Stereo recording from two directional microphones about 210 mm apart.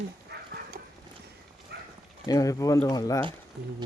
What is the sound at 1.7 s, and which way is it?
Clip-clop, 50° right (ahead or behind).